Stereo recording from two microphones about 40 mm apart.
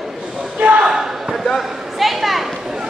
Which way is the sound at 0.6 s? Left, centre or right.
Right.